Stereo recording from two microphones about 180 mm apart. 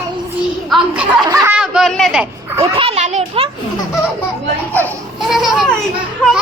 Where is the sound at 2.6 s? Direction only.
30° right (ahead or behind).